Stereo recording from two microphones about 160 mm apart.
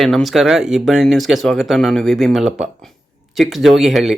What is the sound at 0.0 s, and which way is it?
Speech, centre (ahead or behind).